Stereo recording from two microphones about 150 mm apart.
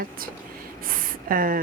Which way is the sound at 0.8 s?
70° right (ahead or behind).